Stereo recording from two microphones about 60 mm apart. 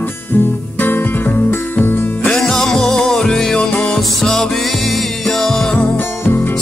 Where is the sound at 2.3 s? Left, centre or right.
Centre.